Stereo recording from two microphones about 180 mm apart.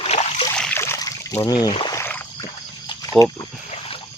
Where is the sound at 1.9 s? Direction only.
15° left (ahead or behind).